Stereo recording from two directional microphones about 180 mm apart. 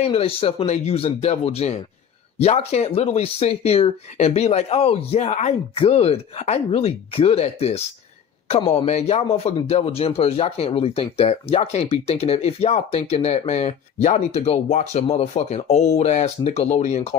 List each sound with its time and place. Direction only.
0.0 s speech: 35° left (ahead or behind)